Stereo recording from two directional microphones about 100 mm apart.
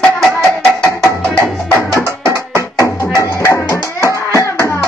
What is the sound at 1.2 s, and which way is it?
Music, 20° left (ahead or behind).